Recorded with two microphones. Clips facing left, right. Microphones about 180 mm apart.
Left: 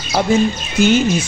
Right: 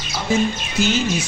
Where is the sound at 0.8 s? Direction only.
55° left (ahead or behind).